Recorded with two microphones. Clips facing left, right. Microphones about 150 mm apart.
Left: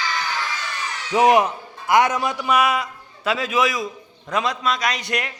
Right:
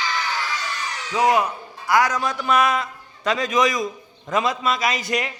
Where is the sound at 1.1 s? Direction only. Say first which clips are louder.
Left 3 dB; 20° left (ahead or behind).